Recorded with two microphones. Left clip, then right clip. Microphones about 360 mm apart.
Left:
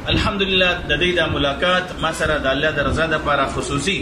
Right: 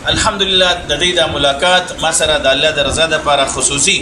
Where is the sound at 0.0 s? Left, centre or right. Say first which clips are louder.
Right 6 dB; centre.